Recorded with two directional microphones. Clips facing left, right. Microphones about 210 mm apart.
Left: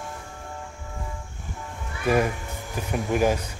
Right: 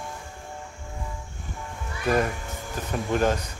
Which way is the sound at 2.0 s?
10° left (ahead or behind).